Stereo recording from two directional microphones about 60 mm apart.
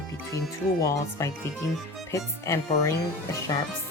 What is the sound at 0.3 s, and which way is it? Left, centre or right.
Speech, left.